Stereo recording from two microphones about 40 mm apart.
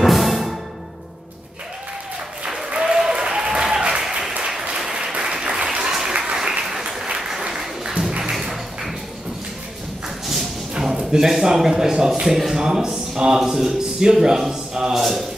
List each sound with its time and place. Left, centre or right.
0.0 s music: centre
2.7 s applause: right
7.4 s music: right
8.2 s music: centre
10.8 s speech: centre
14.2 s a sound: centre
15.0 s a sound: centre